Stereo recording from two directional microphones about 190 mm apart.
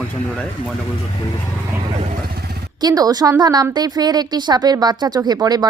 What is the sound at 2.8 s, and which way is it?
A woman's voice, 20° right (ahead or behind).